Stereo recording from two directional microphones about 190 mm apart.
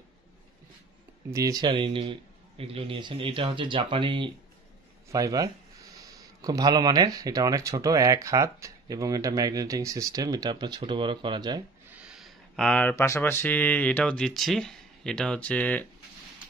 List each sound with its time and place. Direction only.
1.3 s a man's voice: 20° right (ahead or behind)
11.9 s speech: 5° right (ahead or behind)